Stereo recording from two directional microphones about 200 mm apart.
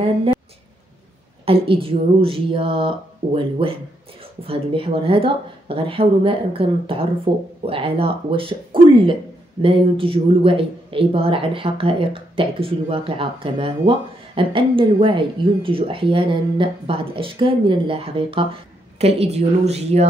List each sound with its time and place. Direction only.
1.4 s speech: 30° right (ahead or behind)